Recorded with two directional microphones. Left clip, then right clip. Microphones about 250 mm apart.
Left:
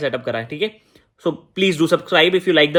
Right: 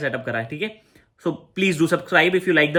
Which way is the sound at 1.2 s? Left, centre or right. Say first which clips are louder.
Left 4 dB; centre.